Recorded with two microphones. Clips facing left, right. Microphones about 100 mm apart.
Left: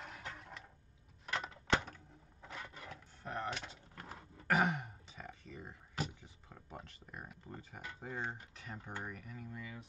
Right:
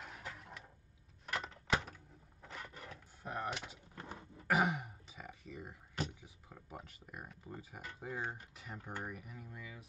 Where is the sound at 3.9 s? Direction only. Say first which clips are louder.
Right 2 dB; 25° right (ahead or behind).